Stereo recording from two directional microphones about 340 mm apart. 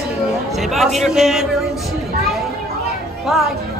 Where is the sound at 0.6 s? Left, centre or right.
Centre.